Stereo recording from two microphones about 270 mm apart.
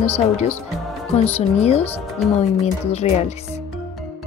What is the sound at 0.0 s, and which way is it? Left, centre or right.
Speech, left.